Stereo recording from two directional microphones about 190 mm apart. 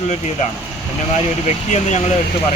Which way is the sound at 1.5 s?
35° left (ahead or behind).